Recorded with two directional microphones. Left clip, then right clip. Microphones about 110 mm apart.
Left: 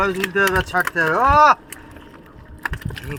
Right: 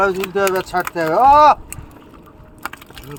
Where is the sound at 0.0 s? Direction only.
60° right (ahead or behind); by 1.5 s 45° right (ahead or behind).